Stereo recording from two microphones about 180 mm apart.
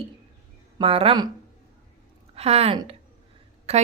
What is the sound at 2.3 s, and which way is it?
A woman's voice, 35° right (ahead or behind).